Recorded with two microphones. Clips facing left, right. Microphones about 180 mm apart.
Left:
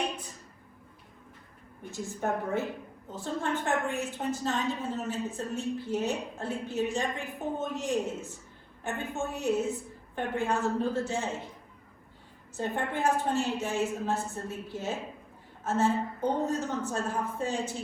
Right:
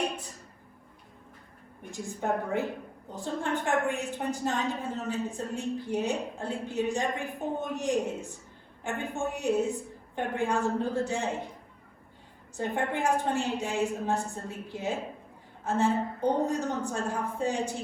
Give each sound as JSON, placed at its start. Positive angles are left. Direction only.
{"t": 1.9, "sound": "a woman's voice", "side_deg": -15}
{"t": 12.5, "sound": "a woman's voice", "side_deg": -15}